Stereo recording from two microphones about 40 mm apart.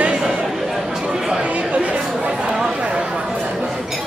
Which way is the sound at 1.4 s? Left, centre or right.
Right.